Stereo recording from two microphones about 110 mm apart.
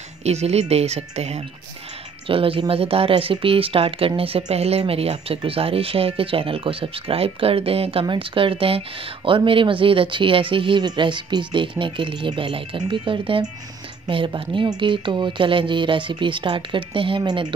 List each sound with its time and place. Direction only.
0.2 s speech: 75° right (ahead or behind)
2.2 s speech: 55° right (ahead or behind)
4.5 s speech: 70° right (ahead or behind); by 17.6 s 45° right (ahead or behind)